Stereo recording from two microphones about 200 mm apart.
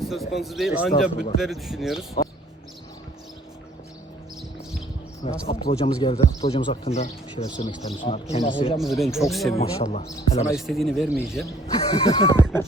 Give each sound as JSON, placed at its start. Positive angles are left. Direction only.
{"t": 0.0, "sound": "speech", "side_deg": 0}
{"t": 5.2, "sound": "speech", "side_deg": 30}
{"t": 8.8, "sound": "speech", "side_deg": 0}
{"t": 9.6, "sound": "speech", "side_deg": 30}
{"t": 10.6, "sound": "speech", "side_deg": 0}
{"t": 11.6, "sound": "speech", "side_deg": 30}